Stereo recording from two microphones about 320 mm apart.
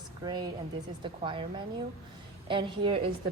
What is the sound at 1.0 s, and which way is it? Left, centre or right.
Speech, centre.